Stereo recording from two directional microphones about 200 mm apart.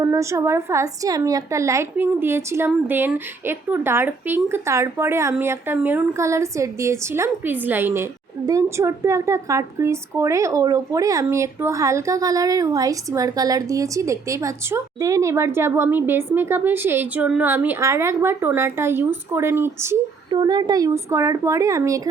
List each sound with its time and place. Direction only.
0.0 s a woman's voice: 15° right (ahead or behind)